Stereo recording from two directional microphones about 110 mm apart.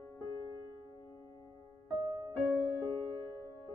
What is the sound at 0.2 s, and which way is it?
Music, 30° left (ahead or behind).